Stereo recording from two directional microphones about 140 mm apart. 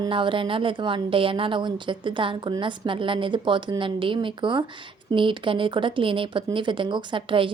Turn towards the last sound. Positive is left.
turn(degrees=-35)  # may be behind; listen again after turning